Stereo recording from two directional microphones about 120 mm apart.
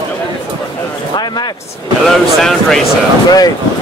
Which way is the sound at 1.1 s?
35° left (ahead or behind).